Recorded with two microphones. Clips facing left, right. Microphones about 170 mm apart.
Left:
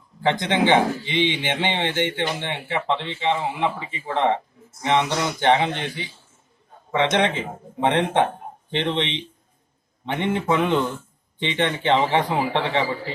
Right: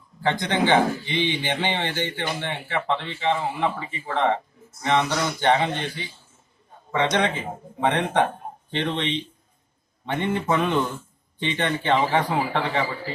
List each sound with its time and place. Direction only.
0.2 s speech: 20° left (ahead or behind)